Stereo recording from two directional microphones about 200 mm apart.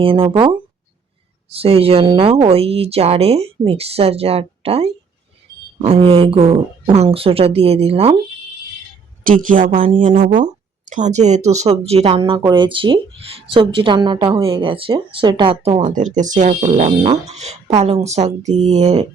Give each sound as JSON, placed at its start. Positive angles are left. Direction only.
{"t": 0.0, "sound": "speech", "side_deg": -25}
{"t": 9.5, "sound": "a woman's voice", "side_deg": -40}
{"t": 16.0, "sound": "a woman's voice", "side_deg": -40}